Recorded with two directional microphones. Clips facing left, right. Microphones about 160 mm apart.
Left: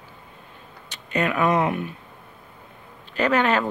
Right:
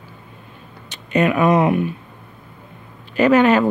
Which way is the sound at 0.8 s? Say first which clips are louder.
Right 7 dB; 20° right (ahead or behind).